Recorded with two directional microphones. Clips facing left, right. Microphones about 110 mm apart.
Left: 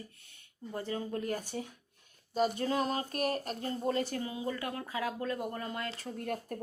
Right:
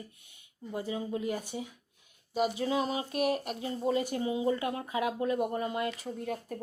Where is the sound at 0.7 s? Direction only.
10° right (ahead or behind).